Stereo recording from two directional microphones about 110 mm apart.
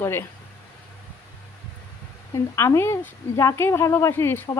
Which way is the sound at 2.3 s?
25° left (ahead or behind).